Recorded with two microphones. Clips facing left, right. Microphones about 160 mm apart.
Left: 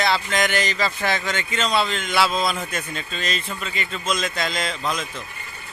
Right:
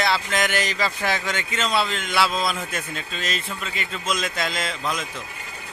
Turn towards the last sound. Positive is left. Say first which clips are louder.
# left 1 dB
turn(degrees=-5)  # may be behind; listen again after turning